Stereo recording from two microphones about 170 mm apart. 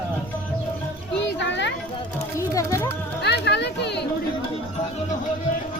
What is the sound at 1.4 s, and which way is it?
Children playing, 90° left.